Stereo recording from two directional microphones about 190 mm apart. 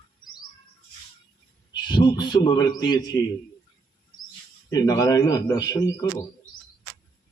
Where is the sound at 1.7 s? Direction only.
25° left (ahead or behind).